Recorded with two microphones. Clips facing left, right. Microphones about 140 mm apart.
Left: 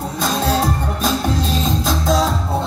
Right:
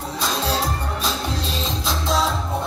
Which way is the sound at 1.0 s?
50° left (ahead or behind).